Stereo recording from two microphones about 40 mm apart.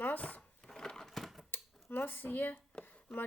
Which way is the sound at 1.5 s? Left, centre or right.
Left.